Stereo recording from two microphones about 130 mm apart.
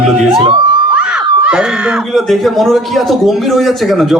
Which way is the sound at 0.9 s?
5° right (ahead or behind).